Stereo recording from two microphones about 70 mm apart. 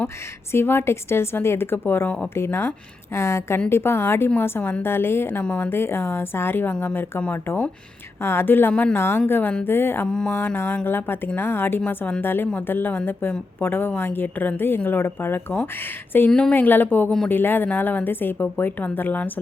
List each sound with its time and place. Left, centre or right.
0.5 s a woman's voice: left
2.0 s a woman's voice: centre
2.3 s a woman's voice: left
5.4 s a woman's voice: left
6.7 s a woman's voice: left
8.7 s a woman's voice: centre
9.0 s a woman's voice: left
10.1 s a woman's voice: centre
10.3 s a woman's voice: left